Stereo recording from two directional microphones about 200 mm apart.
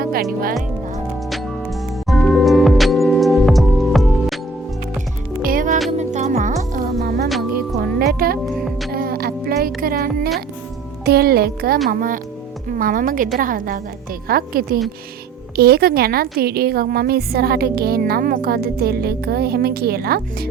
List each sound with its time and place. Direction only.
0.0 s music: 50° right (ahead or behind)
2.0 s music: 5° left (ahead or behind)
5.4 s music: 45° right (ahead or behind)
7.0 s music: 50° right (ahead or behind)
7.3 s music: centre (ahead or behind)
7.8 s music: 50° right (ahead or behind)
8.5 s music: centre (ahead or behind)
8.9 s music: 50° right (ahead or behind)
11.0 s a woman's voice: 50° right (ahead or behind)